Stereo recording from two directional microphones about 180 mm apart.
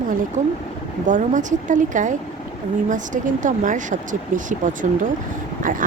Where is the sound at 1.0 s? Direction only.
45° right (ahead or behind).